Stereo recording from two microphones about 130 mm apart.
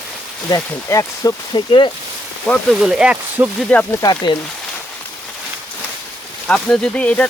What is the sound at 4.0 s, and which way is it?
Speech, 35° left (ahead or behind).